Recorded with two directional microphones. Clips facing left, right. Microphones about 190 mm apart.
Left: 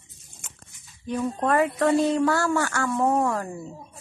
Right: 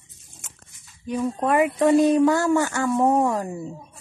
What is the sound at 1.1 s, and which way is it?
Speech, 10° right (ahead or behind).